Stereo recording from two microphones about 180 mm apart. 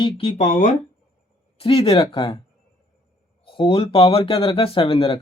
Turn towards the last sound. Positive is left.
turn(degrees=30)  # may be behind; listen again after turning